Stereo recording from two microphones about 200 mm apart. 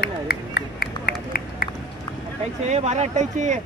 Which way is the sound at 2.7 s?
35° right (ahead or behind).